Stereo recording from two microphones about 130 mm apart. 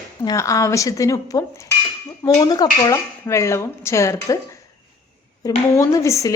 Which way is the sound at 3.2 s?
20° left (ahead or behind).